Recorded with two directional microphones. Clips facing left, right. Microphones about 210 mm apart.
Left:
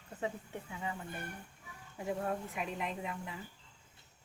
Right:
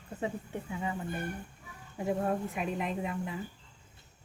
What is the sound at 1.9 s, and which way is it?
Speech, 35° right (ahead or behind).